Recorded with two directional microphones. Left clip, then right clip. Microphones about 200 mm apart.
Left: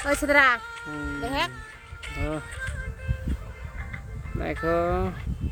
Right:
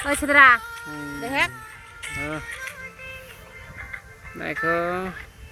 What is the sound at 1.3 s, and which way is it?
Speech, 20° right (ahead or behind).